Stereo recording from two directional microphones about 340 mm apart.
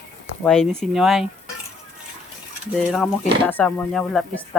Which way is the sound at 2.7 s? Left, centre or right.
Centre.